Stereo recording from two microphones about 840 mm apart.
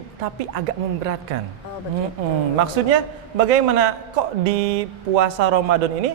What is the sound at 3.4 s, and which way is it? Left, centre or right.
A man's voice, right.